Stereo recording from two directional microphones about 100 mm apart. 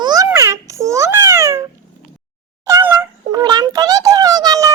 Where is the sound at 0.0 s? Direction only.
40° right (ahead or behind).